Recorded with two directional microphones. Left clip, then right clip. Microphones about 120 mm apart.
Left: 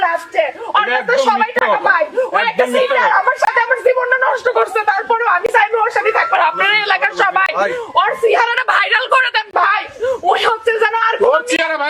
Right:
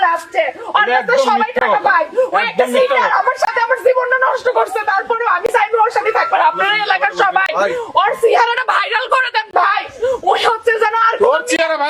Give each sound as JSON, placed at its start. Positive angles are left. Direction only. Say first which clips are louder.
{"t": 0.0, "sound": "speech", "louder": "right 1 dB", "side_deg": 0}
{"t": 11.5, "sound": "a man's voice", "louder": "right 1 dB", "side_deg": -15}